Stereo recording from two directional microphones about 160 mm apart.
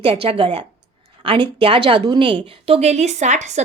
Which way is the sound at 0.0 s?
35° right (ahead or behind).